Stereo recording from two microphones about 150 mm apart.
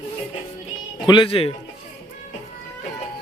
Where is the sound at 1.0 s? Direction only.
35° left (ahead or behind).